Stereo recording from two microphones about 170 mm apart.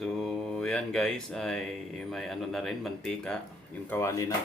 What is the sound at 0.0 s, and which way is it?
Mantra, centre (ahead or behind).